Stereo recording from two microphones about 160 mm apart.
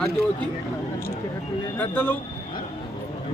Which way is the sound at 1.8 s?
10° left (ahead or behind).